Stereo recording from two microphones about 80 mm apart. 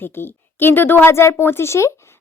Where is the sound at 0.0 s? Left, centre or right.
Left.